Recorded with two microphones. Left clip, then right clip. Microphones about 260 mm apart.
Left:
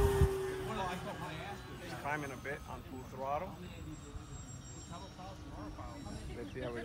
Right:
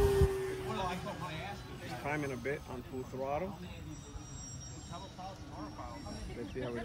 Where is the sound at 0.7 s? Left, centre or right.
Right.